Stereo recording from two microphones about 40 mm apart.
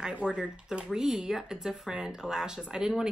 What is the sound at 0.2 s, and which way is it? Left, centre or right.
Speech, right.